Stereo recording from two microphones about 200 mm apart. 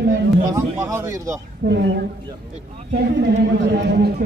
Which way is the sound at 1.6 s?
60° right (ahead or behind).